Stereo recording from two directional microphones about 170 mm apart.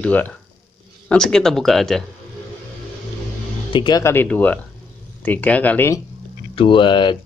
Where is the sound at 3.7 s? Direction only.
25° left (ahead or behind).